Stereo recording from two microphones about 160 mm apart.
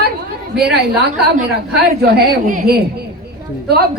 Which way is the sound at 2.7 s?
75° right (ahead or behind).